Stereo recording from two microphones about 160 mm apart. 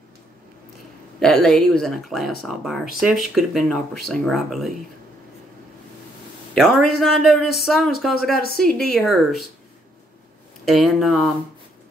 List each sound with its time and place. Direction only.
1.2 s speech: 5° left (ahead or behind)
6.5 s speech: centre (ahead or behind)
8.1 s speech: 75° left (ahead or behind)
8.5 s speech: 5° left (ahead or behind)
10.6 s speech: centre (ahead or behind)